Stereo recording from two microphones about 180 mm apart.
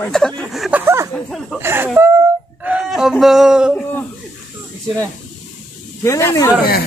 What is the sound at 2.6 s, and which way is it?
Fowl, 5° right (ahead or behind).